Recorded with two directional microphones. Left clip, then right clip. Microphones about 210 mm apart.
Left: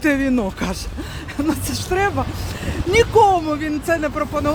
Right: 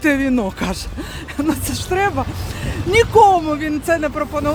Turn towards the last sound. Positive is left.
turn(degrees=-10)  # may be behind; listen again after turning